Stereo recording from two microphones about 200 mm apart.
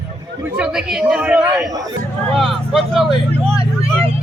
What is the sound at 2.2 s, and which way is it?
Speech, centre (ahead or behind).